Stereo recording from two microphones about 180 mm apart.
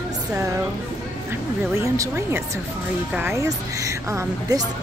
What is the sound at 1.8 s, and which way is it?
A woman's voice, 15° right (ahead or behind).